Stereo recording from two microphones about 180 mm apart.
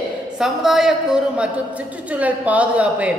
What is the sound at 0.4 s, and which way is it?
Speech, centre (ahead or behind).